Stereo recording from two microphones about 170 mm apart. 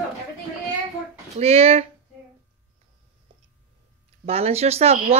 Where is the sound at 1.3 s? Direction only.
35° right (ahead or behind).